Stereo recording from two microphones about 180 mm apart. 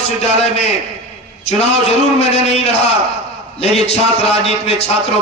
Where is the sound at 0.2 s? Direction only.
35° left (ahead or behind).